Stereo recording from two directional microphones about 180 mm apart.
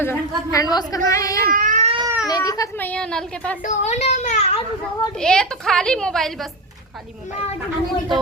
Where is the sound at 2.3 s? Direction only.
20° left (ahead or behind).